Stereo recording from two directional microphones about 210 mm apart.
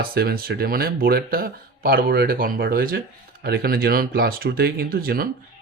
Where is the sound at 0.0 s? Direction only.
45° right (ahead or behind).